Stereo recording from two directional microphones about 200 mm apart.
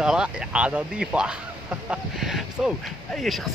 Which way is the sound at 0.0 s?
5° right (ahead or behind).